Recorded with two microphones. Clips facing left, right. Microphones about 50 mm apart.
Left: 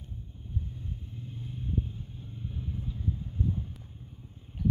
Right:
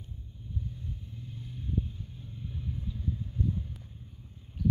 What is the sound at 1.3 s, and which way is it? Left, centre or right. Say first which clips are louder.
Vehicle: left 1 dB; left.